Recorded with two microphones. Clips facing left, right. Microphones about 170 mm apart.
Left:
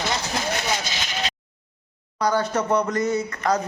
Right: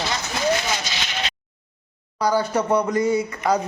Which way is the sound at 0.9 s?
45° left (ahead or behind).